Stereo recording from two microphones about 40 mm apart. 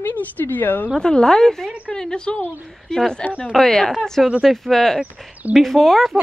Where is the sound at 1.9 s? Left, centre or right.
Left.